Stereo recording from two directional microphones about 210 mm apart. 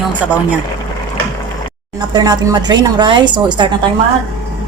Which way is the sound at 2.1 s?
20° right (ahead or behind).